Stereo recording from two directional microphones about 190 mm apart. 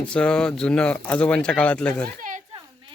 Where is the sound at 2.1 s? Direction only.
45° right (ahead or behind).